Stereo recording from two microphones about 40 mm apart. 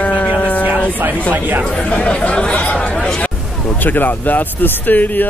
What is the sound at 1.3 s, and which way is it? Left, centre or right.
Speech, right.